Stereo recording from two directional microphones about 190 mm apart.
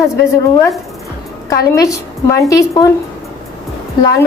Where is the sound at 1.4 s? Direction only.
15° left (ahead or behind).